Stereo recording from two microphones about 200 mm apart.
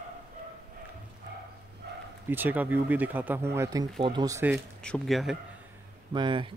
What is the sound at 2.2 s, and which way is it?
Speech, 10° right (ahead or behind).